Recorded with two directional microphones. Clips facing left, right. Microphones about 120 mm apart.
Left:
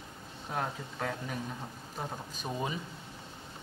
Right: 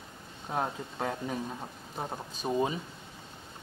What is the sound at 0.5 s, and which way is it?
Speech, 20° right (ahead or behind).